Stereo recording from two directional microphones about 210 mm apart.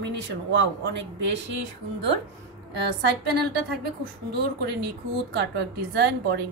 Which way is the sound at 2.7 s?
50° right (ahead or behind).